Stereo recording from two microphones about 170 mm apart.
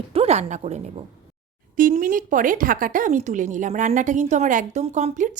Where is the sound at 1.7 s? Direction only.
55° right (ahead or behind).